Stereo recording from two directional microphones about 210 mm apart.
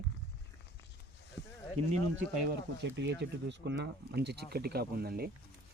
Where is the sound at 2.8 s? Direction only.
55° right (ahead or behind).